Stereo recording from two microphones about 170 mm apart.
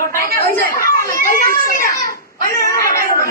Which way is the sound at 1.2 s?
50° left (ahead or behind).